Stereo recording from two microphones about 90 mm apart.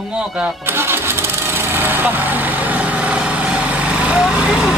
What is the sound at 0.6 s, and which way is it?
Engine starting, 25° right (ahead or behind).